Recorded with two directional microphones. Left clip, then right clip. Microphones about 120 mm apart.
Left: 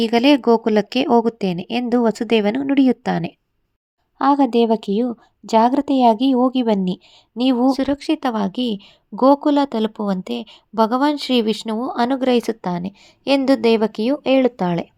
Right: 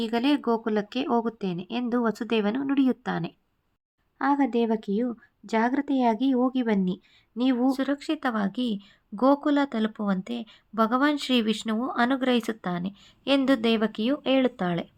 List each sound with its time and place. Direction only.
0.0 s a woman's voice: 55° left (ahead or behind); by 14.8 s 40° left (ahead or behind)